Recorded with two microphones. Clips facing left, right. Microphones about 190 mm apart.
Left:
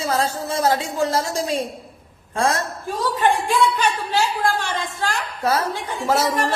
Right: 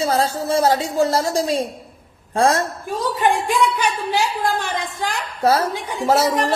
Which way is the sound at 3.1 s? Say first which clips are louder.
Even; 15° right (ahead or behind).